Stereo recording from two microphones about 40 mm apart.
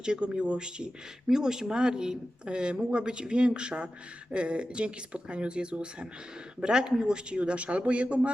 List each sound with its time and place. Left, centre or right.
0.0 s speech: right